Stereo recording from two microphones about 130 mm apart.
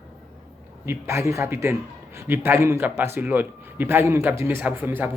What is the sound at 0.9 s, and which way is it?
A man's voice, 20° right (ahead or behind).